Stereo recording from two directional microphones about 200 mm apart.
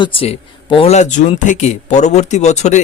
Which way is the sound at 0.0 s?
30° left (ahead or behind).